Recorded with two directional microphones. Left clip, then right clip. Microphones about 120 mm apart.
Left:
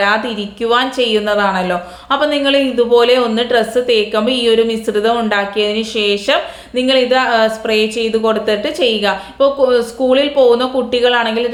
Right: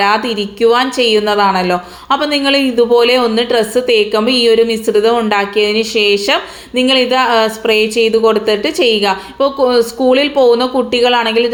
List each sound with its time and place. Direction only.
0.0 s a woman's voice: 35° right (ahead or behind)